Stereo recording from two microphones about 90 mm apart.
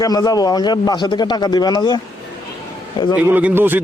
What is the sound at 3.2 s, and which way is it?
Speech, 20° right (ahead or behind).